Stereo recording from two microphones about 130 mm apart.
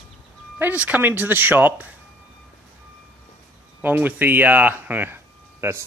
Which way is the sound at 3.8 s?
15° right (ahead or behind).